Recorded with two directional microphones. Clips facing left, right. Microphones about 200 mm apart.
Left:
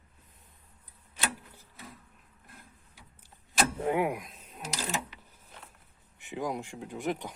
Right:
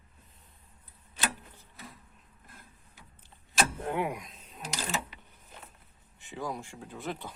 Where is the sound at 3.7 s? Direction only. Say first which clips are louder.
Left 4 dB; 10° left (ahead or behind).